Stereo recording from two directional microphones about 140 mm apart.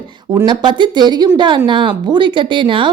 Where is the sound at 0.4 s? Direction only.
30° right (ahead or behind).